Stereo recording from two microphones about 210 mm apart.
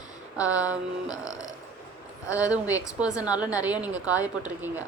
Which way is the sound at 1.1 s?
15° left (ahead or behind).